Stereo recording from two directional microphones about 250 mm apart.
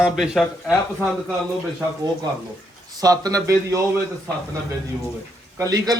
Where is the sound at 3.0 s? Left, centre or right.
Centre.